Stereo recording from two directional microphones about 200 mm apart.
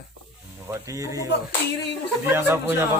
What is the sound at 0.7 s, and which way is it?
Speech, 15° right (ahead or behind).